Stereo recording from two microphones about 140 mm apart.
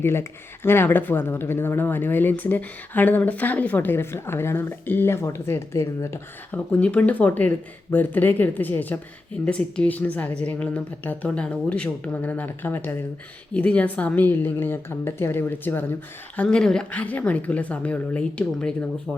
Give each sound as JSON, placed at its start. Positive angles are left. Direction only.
{"t": 0.0, "sound": "speech", "side_deg": 15}
{"t": 6.7, "sound": "speech", "side_deg": 10}